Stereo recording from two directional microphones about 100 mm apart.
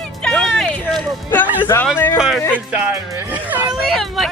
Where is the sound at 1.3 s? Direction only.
15° left (ahead or behind).